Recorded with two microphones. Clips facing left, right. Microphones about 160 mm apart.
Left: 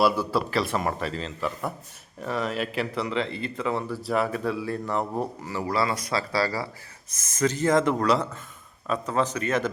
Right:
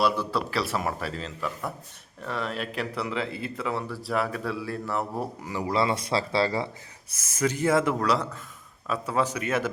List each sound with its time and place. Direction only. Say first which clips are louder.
0.0 s speech: left 3 dB; 5° left (ahead or behind)
5.2 s speech: left 1 dB; 15° right (ahead or behind)
7.1 s speech: left 2 dB; 10° right (ahead or behind)